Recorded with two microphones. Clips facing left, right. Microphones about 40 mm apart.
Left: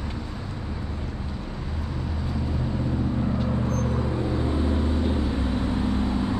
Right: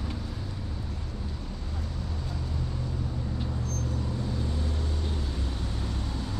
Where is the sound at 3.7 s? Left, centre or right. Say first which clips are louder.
Left 7 dB; left.